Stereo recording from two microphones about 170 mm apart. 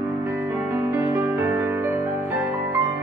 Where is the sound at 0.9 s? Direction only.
15° right (ahead or behind).